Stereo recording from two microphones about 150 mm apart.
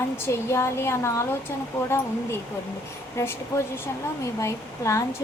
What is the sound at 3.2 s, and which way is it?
Speech, 15° left (ahead or behind).